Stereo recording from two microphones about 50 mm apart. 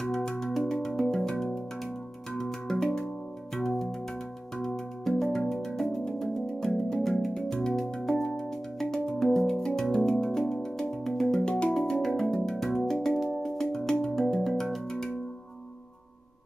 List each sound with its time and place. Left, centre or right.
0.0 s music: centre
11.4 s music: centre
11.7 s music: centre